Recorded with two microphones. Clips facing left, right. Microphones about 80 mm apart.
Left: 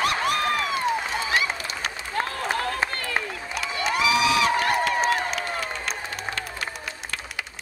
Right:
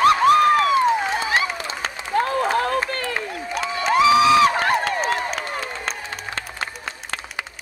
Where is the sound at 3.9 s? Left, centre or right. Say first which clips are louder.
Right 8 dB; right.